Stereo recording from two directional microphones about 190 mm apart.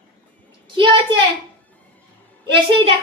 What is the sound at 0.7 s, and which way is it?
Speech, 25° right (ahead or behind).